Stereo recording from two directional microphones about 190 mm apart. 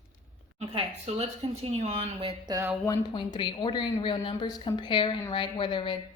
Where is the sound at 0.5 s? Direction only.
35° right (ahead or behind); by 2.8 s 15° right (ahead or behind).